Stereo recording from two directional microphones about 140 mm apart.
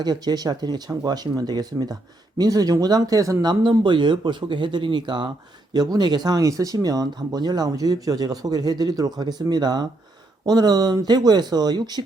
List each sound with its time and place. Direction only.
0.0 s speech: 30° right (ahead or behind)